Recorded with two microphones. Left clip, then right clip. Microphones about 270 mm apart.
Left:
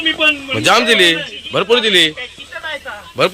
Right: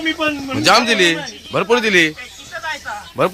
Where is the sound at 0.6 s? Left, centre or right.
Centre.